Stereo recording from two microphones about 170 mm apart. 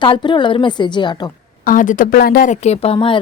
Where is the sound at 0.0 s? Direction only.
25° left (ahead or behind).